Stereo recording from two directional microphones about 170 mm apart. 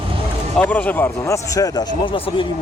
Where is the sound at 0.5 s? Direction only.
10° left (ahead or behind); by 2.4 s 30° left (ahead or behind).